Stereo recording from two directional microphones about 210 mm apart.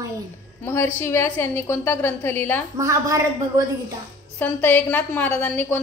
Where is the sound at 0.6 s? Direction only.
10° left (ahead or behind).